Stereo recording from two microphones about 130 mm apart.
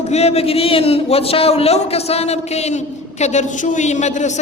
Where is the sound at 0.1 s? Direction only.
55° left (ahead or behind).